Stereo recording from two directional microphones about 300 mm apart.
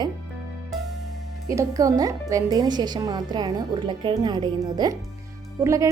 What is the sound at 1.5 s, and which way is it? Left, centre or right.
Speech, centre.